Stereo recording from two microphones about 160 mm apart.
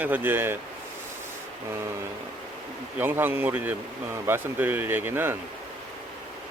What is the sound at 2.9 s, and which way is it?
Speech, 15° right (ahead or behind).